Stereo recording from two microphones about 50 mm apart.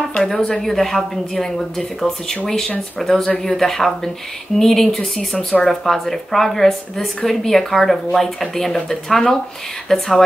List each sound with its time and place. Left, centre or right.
0.3 s a woman's voice: centre
5.3 s speech: centre
5.7 s a woman's voice: centre